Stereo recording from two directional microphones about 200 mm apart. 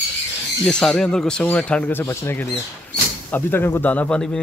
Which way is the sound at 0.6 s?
5° left (ahead or behind).